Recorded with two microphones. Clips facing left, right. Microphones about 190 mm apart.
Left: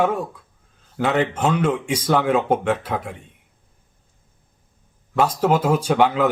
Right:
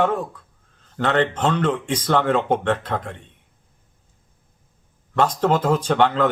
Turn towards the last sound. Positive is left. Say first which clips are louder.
# left 1 dB
turn(degrees=10)  # may be behind; listen again after turning